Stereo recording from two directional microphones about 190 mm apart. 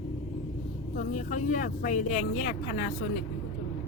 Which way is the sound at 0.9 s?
40° left (ahead or behind).